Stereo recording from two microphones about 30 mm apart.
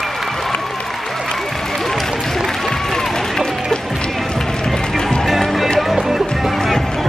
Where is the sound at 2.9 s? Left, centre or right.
Centre.